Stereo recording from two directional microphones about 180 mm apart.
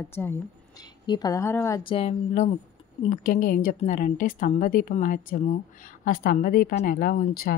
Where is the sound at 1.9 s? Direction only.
35° left (ahead or behind).